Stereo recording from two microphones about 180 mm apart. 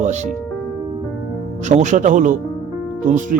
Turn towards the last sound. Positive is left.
turn(degrees=-45)  # may be behind; listen again after turning